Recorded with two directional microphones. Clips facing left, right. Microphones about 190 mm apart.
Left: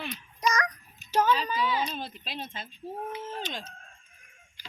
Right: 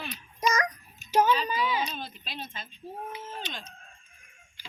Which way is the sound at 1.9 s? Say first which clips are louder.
Left 2 dB; 30° left (ahead or behind).